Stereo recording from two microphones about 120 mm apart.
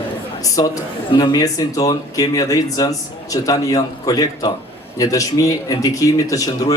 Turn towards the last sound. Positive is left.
turn(degrees=30)  # may be behind; listen again after turning